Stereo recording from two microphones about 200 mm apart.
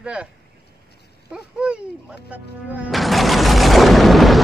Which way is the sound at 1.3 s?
5° right (ahead or behind).